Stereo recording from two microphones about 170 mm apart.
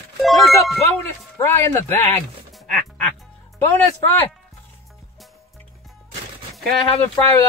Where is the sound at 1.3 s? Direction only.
15° left (ahead or behind).